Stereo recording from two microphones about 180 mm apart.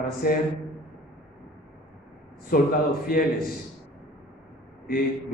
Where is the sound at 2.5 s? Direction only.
50° left (ahead or behind).